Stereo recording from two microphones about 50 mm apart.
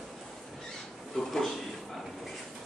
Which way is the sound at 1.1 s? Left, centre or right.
Centre.